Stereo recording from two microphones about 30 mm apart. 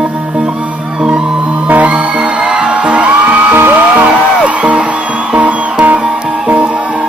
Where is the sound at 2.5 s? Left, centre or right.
Right.